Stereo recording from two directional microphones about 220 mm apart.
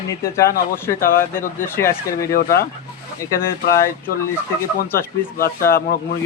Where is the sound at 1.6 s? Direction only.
10° left (ahead or behind).